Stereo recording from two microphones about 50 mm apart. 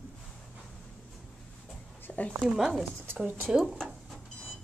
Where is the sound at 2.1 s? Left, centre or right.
Left.